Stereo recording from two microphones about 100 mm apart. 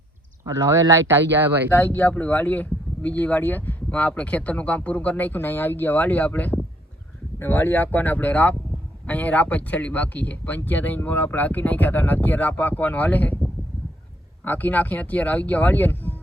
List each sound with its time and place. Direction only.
0.4 s speech: 35° right (ahead or behind)
1.7 s speech: 15° left (ahead or behind)
14.4 s speech: 15° left (ahead or behind)